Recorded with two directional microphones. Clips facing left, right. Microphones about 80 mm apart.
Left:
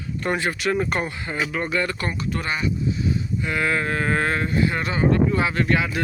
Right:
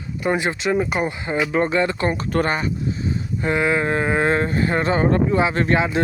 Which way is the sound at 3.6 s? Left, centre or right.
Centre.